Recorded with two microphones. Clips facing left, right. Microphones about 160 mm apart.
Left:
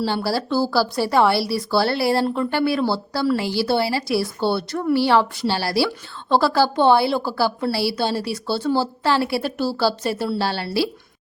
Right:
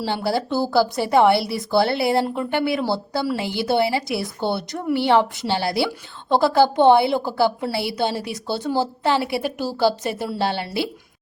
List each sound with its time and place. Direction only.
0.0 s speech: 20° right (ahead or behind)